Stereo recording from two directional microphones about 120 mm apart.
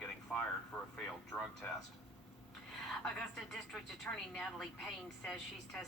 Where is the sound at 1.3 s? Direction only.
15° left (ahead or behind).